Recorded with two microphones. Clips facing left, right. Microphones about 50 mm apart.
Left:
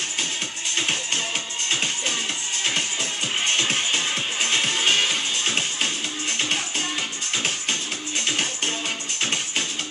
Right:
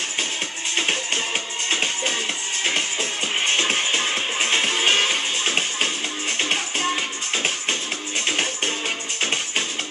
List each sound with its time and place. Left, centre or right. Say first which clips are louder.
0.7 s music: right 2 dB; right
8.3 s music: right 2 dB; right